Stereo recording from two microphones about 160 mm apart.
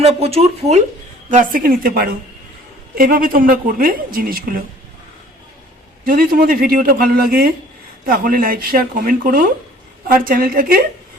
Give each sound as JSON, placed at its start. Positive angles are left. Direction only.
{"t": 0.0, "sound": "speech", "side_deg": -40}
{"t": 1.3, "sound": "speech", "side_deg": -55}
{"t": 6.1, "sound": "speech", "side_deg": -65}